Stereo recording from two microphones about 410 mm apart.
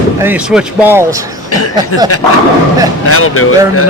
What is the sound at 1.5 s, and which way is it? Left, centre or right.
Speech, left.